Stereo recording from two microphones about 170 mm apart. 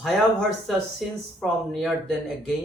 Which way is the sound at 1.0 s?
Centre (ahead or behind).